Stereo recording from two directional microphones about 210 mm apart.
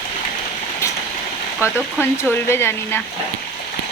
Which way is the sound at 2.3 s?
10° left (ahead or behind).